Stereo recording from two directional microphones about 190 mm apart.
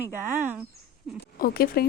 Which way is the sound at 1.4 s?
50° left (ahead or behind).